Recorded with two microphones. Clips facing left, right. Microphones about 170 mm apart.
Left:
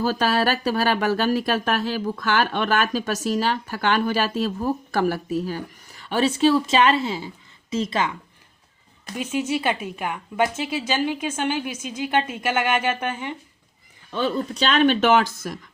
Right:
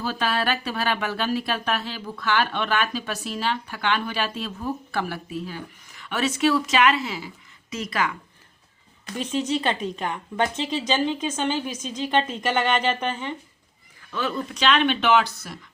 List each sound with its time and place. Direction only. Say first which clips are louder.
0.0 s speech: left 5 dB; 40° left (ahead or behind); by 8.1 s 25° left (ahead or behind)
9.1 s speech: left 1 dB; 10° left (ahead or behind)
14.1 s speech: left 4 dB; 30° left (ahead or behind)